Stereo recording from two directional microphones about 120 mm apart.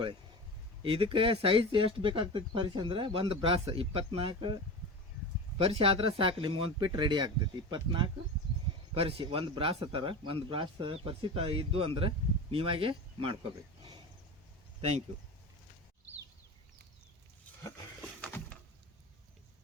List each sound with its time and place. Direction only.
0.8 s speech: 45° right (ahead or behind)
9.0 s speech: 50° right (ahead or behind)
18.0 s a sound: 15° left (ahead or behind)